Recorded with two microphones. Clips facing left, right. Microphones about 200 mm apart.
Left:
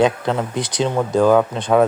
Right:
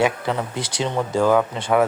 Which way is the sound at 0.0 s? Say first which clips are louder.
Left 4 dB; 20° left (ahead or behind).